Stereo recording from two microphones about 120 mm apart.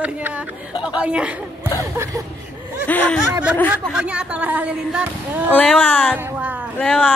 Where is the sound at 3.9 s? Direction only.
10° right (ahead or behind).